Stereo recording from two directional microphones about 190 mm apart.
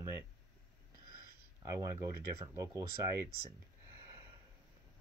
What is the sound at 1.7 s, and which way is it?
Speech, 15° right (ahead or behind).